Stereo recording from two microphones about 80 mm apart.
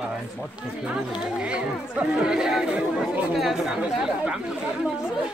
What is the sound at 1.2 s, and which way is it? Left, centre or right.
Speech, centre.